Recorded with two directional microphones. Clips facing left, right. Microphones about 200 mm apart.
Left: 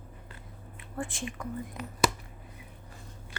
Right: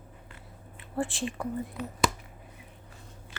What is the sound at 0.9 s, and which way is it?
Speech, 30° right (ahead or behind).